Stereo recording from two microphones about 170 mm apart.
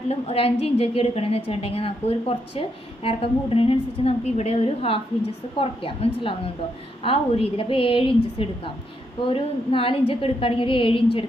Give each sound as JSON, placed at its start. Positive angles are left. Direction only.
{"t": 0.1, "sound": "a woman's voice", "side_deg": 35}